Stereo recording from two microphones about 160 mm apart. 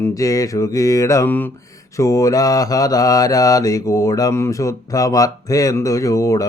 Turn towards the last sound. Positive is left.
turn(degrees=20)  # may be behind; listen again after turning